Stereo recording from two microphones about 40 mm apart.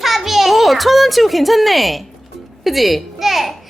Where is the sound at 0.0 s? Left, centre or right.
Centre.